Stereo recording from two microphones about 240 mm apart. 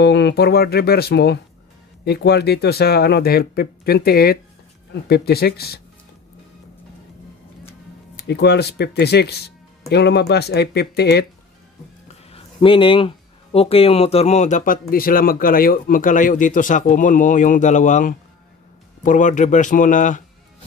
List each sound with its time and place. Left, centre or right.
0.0 s speech: left
8.2 s speech: left
12.3 s speech: left